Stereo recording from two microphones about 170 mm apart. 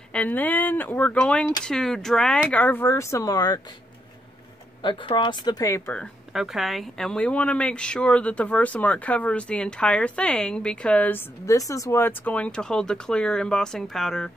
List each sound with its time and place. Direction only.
0.1 s a woman's voice: 10° left (ahead or behind)
4.8 s speech: 30° left (ahead or behind)
5.9 s a woman's voice: centre (ahead or behind)